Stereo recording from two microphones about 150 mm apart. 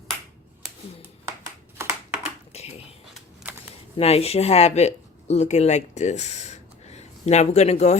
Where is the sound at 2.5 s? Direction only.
45° left (ahead or behind).